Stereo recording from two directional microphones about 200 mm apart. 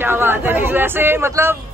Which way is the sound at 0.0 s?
10° right (ahead or behind).